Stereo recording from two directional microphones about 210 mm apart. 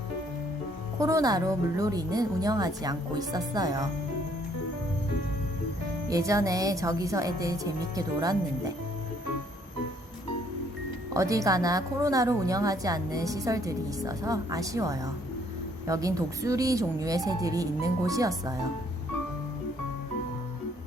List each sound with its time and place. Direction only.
0.9 s speech: 15° right (ahead or behind)
6.1 s speech: 15° right (ahead or behind)
11.1 s speech: 15° right (ahead or behind)